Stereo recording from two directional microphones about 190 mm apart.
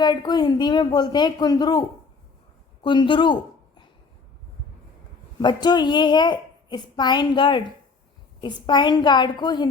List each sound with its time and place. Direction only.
0.0 s a woman's voice: 20° left (ahead or behind)
2.8 s a woman's voice: 25° left (ahead or behind)
5.4 s a woman's voice: 25° left (ahead or behind)